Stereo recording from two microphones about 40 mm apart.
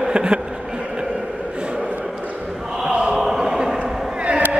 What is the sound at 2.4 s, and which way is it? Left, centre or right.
Chant, centre.